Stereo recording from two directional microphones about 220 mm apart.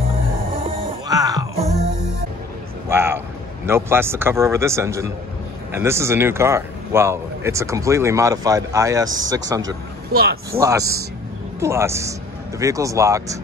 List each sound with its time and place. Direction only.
0.7 s music: 15° right (ahead or behind)
2.9 s speech: 10° right (ahead or behind)